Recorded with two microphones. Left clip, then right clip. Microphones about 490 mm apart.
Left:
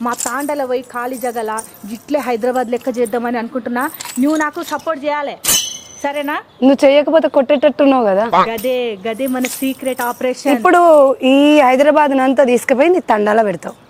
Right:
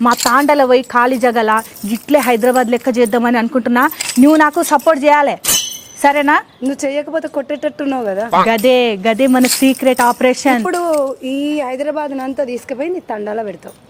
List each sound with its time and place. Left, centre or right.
0.0 s speech: right
2.0 s speech: centre
6.6 s speech: left
8.4 s speech: right
10.7 s speech: left